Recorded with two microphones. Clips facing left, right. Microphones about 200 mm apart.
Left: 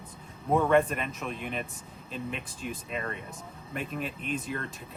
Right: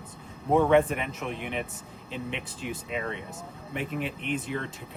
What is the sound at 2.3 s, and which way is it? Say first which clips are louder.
Speech: right 2 dB; 75° right (ahead or behind).